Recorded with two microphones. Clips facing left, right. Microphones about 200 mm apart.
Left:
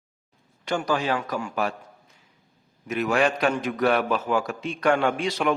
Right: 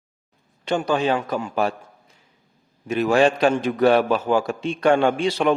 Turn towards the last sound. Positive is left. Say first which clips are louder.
# right 5 dB
turn(degrees=-30)  # may be behind; listen again after turning